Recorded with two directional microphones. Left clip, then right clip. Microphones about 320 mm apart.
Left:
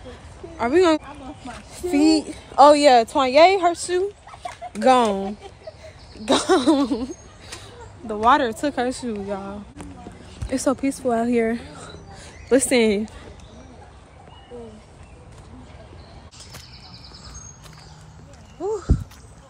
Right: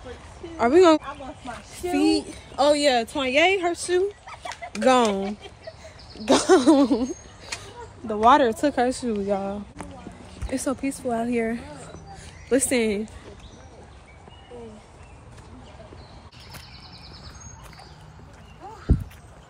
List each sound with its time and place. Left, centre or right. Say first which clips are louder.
0.6 s speech: right 1 dB; centre
2.1 s a woman's voice: left 9 dB; left
3.7 s speech: even; centre
6.2 s a sound: right 1 dB; centre
10.5 s a woman's voice: left 5 dB; centre